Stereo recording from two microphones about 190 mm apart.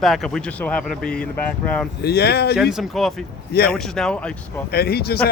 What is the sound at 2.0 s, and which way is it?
Speech, 60° left (ahead or behind).